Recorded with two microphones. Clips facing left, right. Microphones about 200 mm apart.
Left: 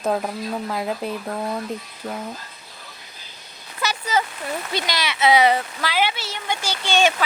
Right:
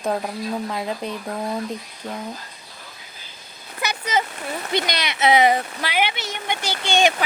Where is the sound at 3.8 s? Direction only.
15° right (ahead or behind).